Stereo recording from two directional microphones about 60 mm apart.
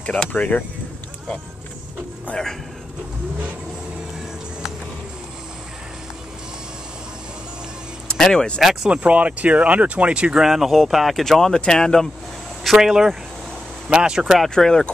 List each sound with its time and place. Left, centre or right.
0.0 s speech: left
2.3 s speech: left
8.1 s speech: centre
8.5 s speech: centre
8.9 s speech: right
10.4 s speech: centre
12.6 s speech: centre
14.5 s speech: centre